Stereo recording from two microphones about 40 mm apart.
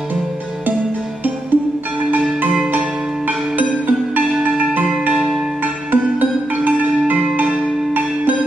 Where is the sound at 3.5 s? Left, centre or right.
Right.